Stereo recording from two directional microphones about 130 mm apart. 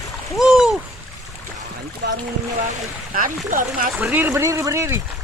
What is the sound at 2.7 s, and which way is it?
Speech, 90° right.